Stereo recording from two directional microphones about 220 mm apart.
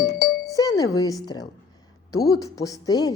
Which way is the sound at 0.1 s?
45° left (ahead or behind).